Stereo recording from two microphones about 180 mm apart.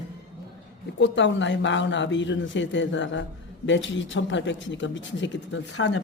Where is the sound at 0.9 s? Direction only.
90° left.